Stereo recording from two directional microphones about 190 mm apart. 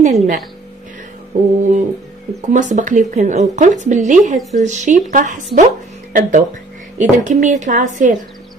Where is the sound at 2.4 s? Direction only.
40° right (ahead or behind).